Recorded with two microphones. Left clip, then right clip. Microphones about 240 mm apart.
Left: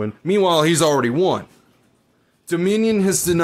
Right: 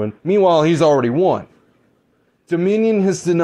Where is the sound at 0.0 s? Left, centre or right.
Centre.